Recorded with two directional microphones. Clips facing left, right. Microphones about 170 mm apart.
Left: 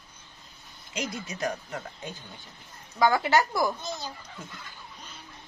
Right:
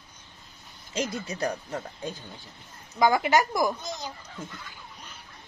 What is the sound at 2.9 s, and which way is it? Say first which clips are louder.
Speech: right 1 dB; 15° right (ahead or behind).